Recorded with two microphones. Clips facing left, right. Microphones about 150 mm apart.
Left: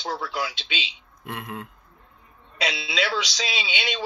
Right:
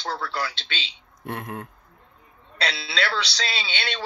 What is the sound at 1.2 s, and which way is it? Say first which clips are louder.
Speech: right 2 dB; 45° right (ahead or behind).